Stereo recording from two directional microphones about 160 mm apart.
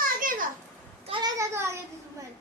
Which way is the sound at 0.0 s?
60° right (ahead or behind).